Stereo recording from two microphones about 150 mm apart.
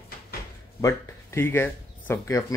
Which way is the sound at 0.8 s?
20° left (ahead or behind).